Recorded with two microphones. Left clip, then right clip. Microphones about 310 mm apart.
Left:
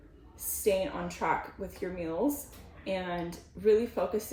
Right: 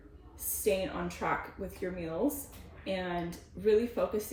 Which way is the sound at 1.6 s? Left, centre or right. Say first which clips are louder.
Left 2 dB; centre.